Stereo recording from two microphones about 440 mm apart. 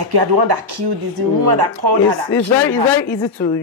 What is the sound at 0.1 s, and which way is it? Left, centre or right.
Speech, right.